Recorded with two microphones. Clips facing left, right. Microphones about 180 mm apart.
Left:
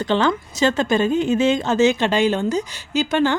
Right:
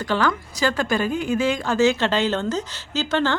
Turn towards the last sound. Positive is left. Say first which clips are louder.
# left 4 dB
turn(degrees=15)  # may be behind; listen again after turning